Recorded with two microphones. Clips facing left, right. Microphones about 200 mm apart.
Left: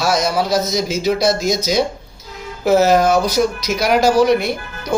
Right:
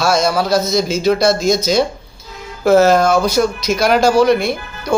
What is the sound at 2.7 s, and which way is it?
Speech, 15° left (ahead or behind).